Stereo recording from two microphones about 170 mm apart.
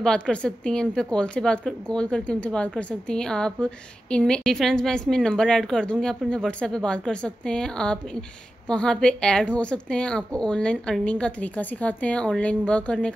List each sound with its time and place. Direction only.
0.0 s a woman's voice: 5° left (ahead or behind)